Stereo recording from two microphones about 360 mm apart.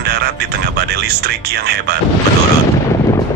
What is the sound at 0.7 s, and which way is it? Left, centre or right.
Speech, right.